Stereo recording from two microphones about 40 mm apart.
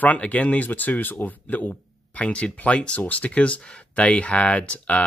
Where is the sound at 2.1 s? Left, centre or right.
Left.